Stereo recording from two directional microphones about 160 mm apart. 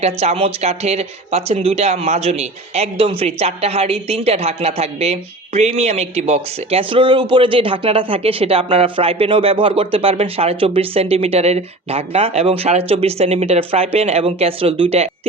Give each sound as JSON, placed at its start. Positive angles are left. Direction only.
{"t": 0.0, "sound": "speech", "side_deg": -40}